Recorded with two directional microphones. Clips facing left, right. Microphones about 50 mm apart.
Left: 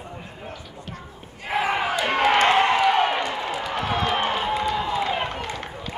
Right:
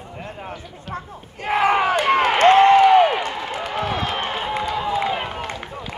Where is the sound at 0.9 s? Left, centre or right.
Right.